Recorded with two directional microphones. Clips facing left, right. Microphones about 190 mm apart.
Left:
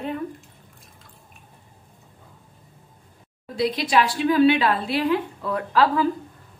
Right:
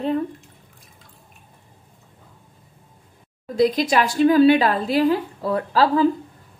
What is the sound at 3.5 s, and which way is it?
A woman's voice, 45° right (ahead or behind).